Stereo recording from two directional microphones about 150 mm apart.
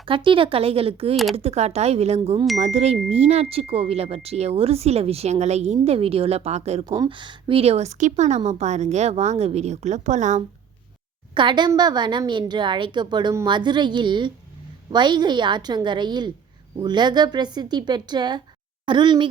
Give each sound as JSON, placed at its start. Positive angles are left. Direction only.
{"t": 0.0, "sound": "speech", "side_deg": -35}
{"t": 1.1, "sound": "speech", "side_deg": 0}
{"t": 1.4, "sound": "speech", "side_deg": -45}
{"t": 6.8, "sound": "speech", "side_deg": -30}
{"t": 11.3, "sound": "a woman's voice", "side_deg": -30}